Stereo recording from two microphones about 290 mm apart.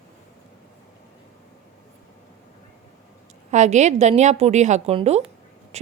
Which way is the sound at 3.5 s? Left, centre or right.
Right.